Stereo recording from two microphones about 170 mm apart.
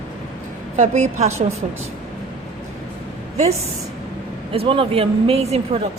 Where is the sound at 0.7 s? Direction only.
45° right (ahead or behind).